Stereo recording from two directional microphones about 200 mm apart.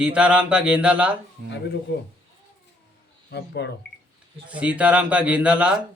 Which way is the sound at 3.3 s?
55° left (ahead or behind).